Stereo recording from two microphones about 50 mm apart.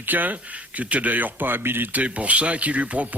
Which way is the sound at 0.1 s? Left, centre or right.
Right.